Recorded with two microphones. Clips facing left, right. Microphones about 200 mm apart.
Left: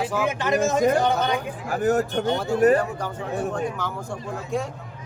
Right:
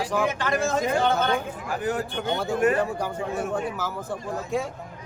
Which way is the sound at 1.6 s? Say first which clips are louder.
Left 6 dB; 45° left (ahead or behind).